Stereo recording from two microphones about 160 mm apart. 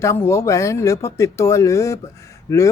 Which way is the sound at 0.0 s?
15° left (ahead or behind).